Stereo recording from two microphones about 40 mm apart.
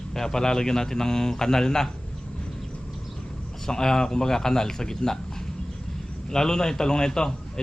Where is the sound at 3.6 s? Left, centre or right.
Centre.